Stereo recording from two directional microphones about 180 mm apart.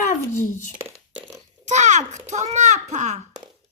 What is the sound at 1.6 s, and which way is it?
A child's voice, 40° right (ahead or behind).